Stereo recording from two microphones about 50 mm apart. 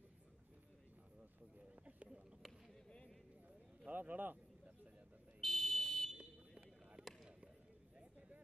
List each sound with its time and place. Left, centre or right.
3.9 s a man's voice: right
5.4 s fire alarm: centre
6.1 s a sound: right